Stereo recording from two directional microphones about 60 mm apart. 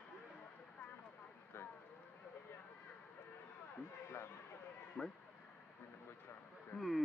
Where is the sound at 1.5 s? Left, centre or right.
Left.